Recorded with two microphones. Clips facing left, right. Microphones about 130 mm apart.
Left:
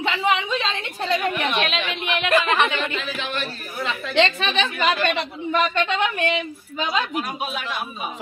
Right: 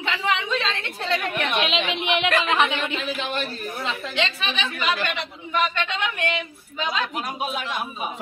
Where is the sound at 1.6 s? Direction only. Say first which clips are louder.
Right 1 dB; 15° right (ahead or behind).